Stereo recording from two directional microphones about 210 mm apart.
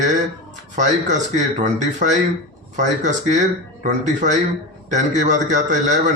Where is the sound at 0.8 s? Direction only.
35° right (ahead or behind).